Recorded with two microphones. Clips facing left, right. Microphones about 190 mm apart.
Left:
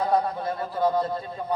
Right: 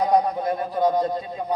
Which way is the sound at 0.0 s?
15° right (ahead or behind).